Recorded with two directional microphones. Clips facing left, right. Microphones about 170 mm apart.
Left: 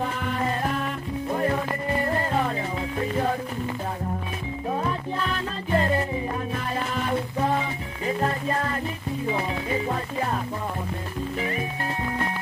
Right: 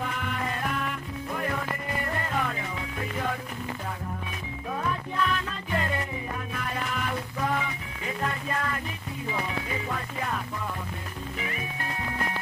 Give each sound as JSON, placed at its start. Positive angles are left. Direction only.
{"t": 0.0, "sound": "music", "side_deg": 35}
{"t": 4.6, "sound": "music", "side_deg": 30}